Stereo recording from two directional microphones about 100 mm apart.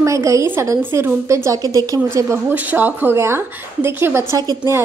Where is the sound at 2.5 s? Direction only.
15° right (ahead or behind); by 4.7 s 35° right (ahead or behind).